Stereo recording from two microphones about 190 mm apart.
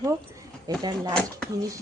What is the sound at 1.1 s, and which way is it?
Speech, 5° left (ahead or behind).